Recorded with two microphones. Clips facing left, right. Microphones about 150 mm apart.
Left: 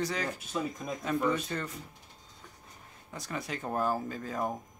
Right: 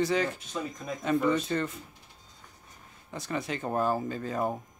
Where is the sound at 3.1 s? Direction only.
Centre (ahead or behind).